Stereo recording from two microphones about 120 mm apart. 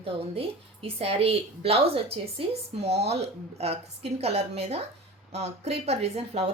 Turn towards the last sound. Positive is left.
turn(degrees=-60)  # may be behind; listen again after turning